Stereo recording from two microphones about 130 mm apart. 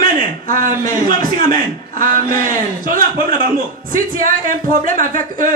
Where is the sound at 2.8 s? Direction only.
90° right.